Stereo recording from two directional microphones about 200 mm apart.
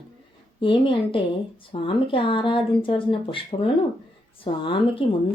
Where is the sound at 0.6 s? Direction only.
25° left (ahead or behind).